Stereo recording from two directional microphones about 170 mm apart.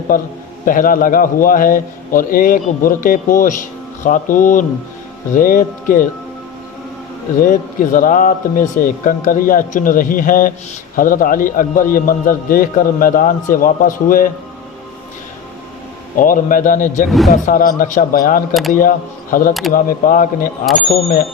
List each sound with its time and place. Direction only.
0.1 s a man's voice: 50° left (ahead or behind)
7.4 s a man's voice: 50° left (ahead or behind)
16.1 s a man's voice: 50° left (ahead or behind)
17.1 s speech: centre (ahead or behind)
17.3 s a man's voice: 50° left (ahead or behind)